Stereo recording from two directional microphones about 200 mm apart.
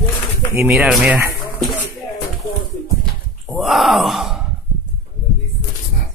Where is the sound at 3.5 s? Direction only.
Centre (ahead or behind).